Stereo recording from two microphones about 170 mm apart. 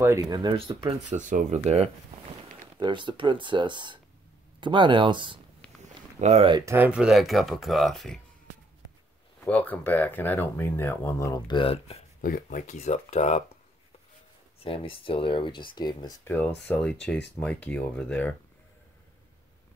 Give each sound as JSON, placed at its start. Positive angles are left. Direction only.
{"t": 0.0, "sound": "speech", "side_deg": -20}
{"t": 1.1, "sound": "speech", "side_deg": -45}
{"t": 2.8, "sound": "speech", "side_deg": -30}
{"t": 5.6, "sound": "a sound", "side_deg": 5}
{"t": 6.2, "sound": "speech", "side_deg": -40}
{"t": 6.5, "sound": "speech", "side_deg": -15}
{"t": 9.4, "sound": "speech", "side_deg": 10}
{"t": 12.2, "sound": "speech", "side_deg": 50}
{"t": 14.6, "sound": "speech", "side_deg": 35}
{"t": 16.6, "sound": "speech", "side_deg": 5}